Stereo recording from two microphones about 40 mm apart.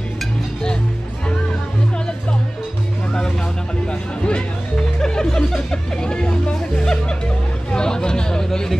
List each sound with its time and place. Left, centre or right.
3.1 s music: centre
7.7 s chatter: centre